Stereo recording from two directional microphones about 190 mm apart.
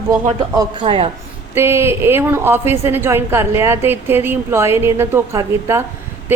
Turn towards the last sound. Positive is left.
turn(degrees=-15)  # may be behind; listen again after turning